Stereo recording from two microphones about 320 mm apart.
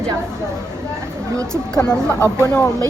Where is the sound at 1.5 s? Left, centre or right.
Centre.